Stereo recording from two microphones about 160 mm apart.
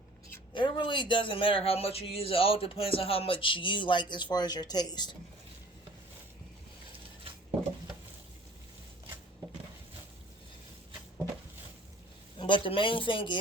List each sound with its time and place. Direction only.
0.5 s speech: 30° left (ahead or behind)
12.4 s speech: 30° left (ahead or behind)